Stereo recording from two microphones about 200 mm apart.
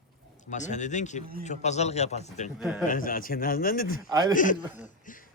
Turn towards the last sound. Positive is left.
turn(degrees=45)  # may be behind; listen again after turning